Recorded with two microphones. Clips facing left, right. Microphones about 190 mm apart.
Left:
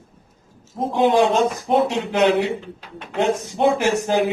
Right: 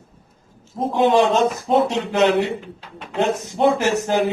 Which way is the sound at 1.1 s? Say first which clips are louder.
Even; 15° left (ahead or behind).